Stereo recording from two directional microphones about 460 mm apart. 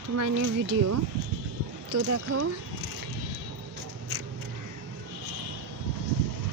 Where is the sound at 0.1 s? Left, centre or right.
Right.